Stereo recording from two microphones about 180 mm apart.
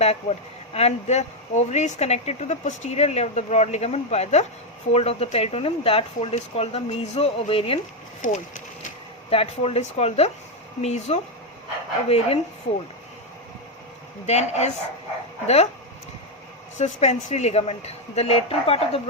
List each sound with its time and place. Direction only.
0.0 s speech: 35° left (ahead or behind)
8.2 s speech: 45° left (ahead or behind)
9.3 s speech: 35° left (ahead or behind)
14.3 s speech: 40° left (ahead or behind)
16.7 s speech: 40° left (ahead or behind)